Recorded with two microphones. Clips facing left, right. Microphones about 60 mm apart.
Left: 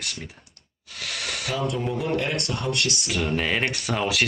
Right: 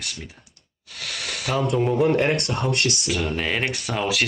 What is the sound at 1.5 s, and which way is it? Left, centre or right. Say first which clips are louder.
Speech: right 6 dB; right.